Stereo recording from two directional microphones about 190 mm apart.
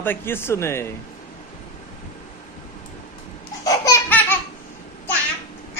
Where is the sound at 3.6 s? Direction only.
20° left (ahead or behind).